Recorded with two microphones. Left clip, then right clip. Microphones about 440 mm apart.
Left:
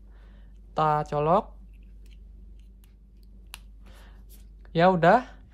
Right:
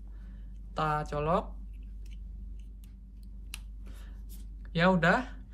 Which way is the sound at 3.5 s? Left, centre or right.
Centre.